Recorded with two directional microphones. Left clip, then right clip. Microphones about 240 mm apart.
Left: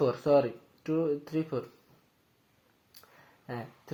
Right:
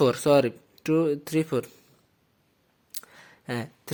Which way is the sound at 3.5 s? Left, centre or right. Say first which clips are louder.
Right 7 dB; right.